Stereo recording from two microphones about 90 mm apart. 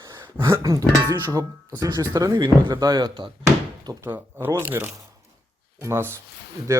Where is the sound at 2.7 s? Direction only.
50° right (ahead or behind).